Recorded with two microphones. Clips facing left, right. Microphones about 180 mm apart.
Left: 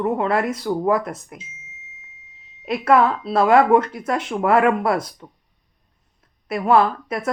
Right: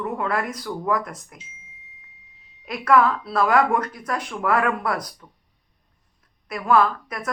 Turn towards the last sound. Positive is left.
turn(degrees=25)  # may be behind; listen again after turning